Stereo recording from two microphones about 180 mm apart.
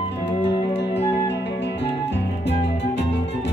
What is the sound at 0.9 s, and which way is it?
Music, 35° left (ahead or behind).